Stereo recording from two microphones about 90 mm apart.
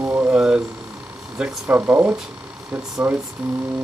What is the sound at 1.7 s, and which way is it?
Speech, 20° right (ahead or behind).